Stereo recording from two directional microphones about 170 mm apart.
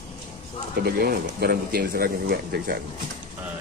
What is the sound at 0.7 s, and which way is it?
Speech, 65° right (ahead or behind).